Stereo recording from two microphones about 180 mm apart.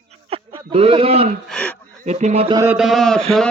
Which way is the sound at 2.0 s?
40° right (ahead or behind).